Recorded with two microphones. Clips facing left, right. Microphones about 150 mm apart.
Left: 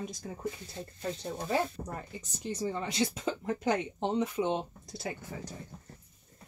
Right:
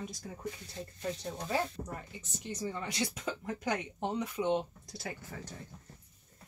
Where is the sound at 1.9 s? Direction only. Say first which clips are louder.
Left 3 dB; 35° left (ahead or behind).